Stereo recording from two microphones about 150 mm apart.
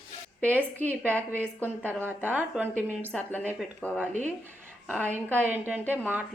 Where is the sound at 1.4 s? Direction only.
10° left (ahead or behind).